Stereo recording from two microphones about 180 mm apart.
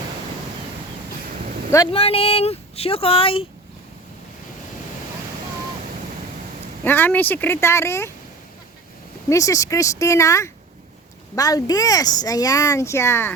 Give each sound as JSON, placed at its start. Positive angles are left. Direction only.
{"t": 1.9, "sound": "speech", "side_deg": 35}
{"t": 6.8, "sound": "speech", "side_deg": 10}
{"t": 9.3, "sound": "speech", "side_deg": 20}